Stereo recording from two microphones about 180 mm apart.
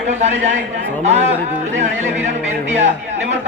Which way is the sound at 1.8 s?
40° right (ahead or behind).